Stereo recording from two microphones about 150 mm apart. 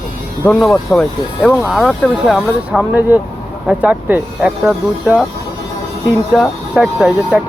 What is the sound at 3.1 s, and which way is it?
Speech, 15° right (ahead or behind).